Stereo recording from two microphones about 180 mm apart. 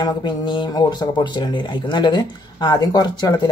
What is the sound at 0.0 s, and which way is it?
Speech, 25° left (ahead or behind).